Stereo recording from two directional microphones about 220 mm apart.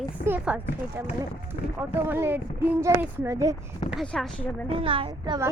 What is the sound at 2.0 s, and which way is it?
Speech, 10° right (ahead or behind).